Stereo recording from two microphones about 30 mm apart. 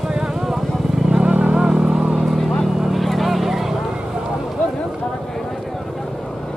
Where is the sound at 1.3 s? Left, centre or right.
Right.